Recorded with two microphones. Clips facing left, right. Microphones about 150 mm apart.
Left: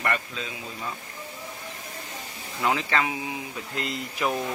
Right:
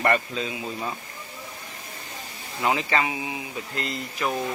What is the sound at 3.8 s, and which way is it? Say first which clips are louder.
Speech: left 1 dB; 10° left (ahead or behind).